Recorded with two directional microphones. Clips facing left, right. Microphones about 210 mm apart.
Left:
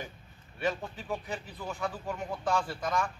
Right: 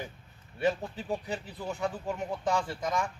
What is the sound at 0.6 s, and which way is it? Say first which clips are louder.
Speech: right 3 dB; 30° right (ahead or behind).